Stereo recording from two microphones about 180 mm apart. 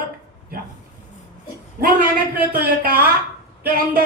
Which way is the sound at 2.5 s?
55° right (ahead or behind).